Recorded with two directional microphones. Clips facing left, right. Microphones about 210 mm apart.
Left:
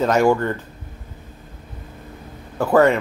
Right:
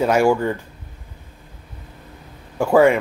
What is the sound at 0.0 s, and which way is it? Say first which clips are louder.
Speech: even; 10° right (ahead or behind).